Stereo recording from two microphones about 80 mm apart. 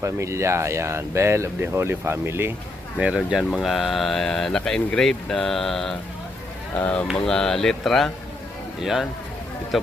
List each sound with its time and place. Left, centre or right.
0.0 s speech: right
3.2 s speech: centre
6.7 s speech: centre
7.3 s speech: centre